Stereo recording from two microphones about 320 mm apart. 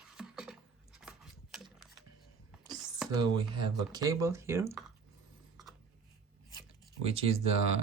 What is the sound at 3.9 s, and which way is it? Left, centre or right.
Speech, centre.